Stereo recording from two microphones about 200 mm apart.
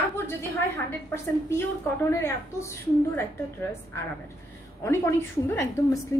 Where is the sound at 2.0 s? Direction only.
15° left (ahead or behind).